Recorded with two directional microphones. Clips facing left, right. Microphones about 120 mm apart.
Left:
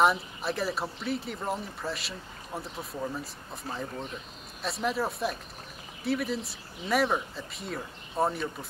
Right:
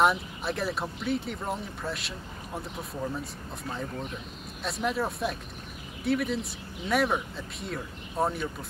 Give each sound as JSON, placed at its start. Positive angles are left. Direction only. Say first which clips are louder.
{"t": 0.0, "sound": "speech", "louder": "even", "side_deg": 0}
{"t": 4.6, "sound": "speech", "louder": "even", "side_deg": 0}